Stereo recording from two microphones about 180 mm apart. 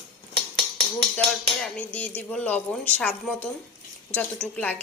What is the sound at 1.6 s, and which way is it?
A woman's voice, 5° left (ahead or behind).